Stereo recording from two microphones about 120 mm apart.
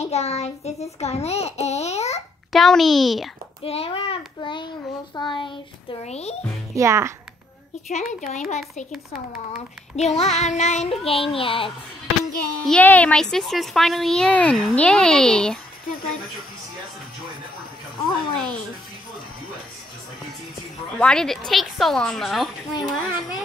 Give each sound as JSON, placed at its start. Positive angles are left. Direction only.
{"t": 0.0, "sound": "a child's voice", "side_deg": 60}
{"t": 0.9, "sound": "babbling", "side_deg": 60}
{"t": 2.5, "sound": "a woman's voice", "side_deg": 0}
{"t": 3.6, "sound": "a child's voice", "side_deg": 55}
{"t": 6.0, "sound": "a child's voice", "side_deg": 60}
{"t": 6.7, "sound": "a child's voice", "side_deg": -25}
{"t": 7.9, "sound": "speech", "side_deg": 75}
{"t": 9.5, "sound": "child singing", "side_deg": 70}
{"t": 11.1, "sound": "a child's voice", "side_deg": 50}
{"t": 12.1, "sound": "child singing", "side_deg": 0}
{"t": 12.8, "sound": "a woman's voice", "side_deg": 10}
{"t": 21.0, "sound": "a woman's voice", "side_deg": 5}